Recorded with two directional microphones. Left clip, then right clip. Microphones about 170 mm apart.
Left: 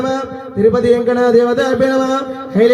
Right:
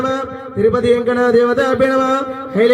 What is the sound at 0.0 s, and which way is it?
A man's voice, 25° right (ahead or behind).